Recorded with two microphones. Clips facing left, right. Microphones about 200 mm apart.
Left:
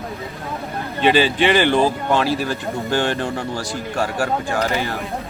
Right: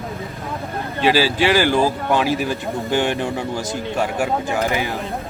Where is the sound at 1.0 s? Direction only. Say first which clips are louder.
Left 1 dB; 5° right (ahead or behind).